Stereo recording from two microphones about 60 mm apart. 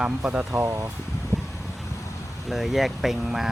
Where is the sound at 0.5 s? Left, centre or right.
Right.